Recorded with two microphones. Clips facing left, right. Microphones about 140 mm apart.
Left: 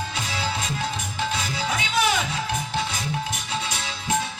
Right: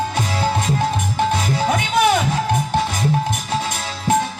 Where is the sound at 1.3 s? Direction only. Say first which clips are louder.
Right 8 dB; 50° right (ahead or behind).